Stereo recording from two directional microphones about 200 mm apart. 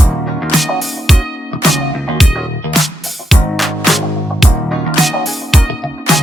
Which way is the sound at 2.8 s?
Centre (ahead or behind).